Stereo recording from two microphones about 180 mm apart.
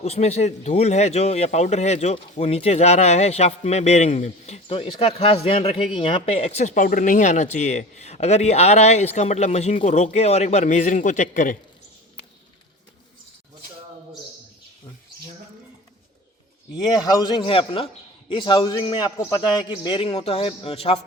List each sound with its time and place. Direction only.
0.0 s speech: 35° left (ahead or behind)
17.0 s a man's voice: 20° left (ahead or behind)